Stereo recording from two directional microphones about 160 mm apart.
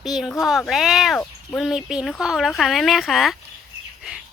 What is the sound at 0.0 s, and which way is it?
Speech, centre (ahead or behind).